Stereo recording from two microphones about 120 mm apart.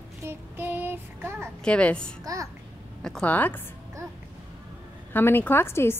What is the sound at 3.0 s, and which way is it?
Speech, 10° left (ahead or behind).